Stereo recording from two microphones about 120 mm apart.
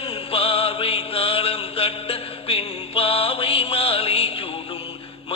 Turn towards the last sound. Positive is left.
turn(degrees=55)  # may be behind; listen again after turning